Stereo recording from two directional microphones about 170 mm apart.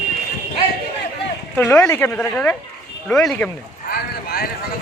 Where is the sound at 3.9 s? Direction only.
65° left (ahead or behind).